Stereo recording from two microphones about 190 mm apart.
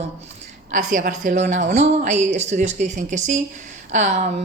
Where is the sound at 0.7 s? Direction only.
45° right (ahead or behind).